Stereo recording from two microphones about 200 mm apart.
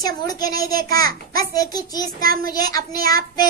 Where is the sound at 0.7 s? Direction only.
50° right (ahead or behind).